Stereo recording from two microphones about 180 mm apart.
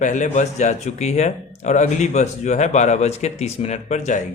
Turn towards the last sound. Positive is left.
turn(degrees=40)  # may be behind; listen again after turning